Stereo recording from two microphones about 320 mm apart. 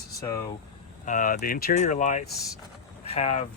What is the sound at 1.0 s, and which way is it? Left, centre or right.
Speech, left.